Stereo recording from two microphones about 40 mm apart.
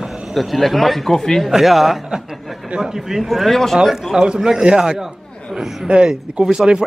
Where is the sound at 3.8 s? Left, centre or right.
Centre.